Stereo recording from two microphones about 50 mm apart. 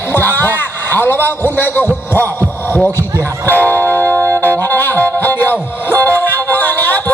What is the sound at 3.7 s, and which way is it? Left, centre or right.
Music, right.